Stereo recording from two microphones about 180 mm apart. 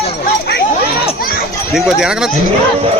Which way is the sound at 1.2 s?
55° left (ahead or behind).